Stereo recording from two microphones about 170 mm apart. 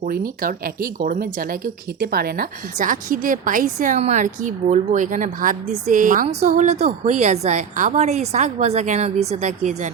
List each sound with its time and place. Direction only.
0.0 s a woman's voice: 60° right (ahead or behind)